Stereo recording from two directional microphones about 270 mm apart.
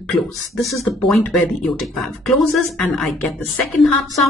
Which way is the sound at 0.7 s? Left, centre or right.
Centre.